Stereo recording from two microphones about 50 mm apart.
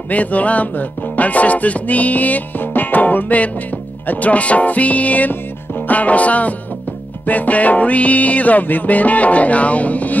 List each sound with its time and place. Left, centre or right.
0.1 s music: left